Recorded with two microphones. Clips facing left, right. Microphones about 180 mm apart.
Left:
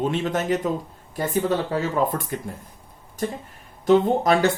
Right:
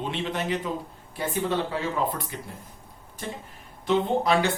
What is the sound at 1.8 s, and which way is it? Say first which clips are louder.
Speech: left 5 dB; 45° left (ahead or behind).